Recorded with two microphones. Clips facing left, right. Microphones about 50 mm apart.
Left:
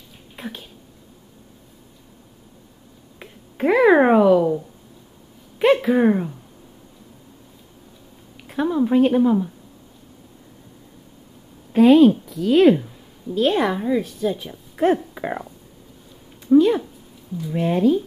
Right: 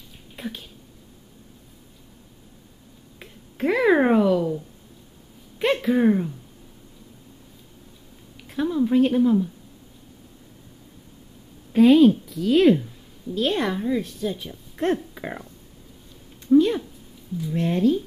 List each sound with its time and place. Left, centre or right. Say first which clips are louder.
0.4 s speech: even; centre
3.2 s a sound: left 3 dB; centre
5.6 s a sound: left 5 dB; centre
6.0 s speech: left 1 dB; centre
8.5 s speech: left 2 dB; centre
11.7 s a woman's voice: left 2 dB; centre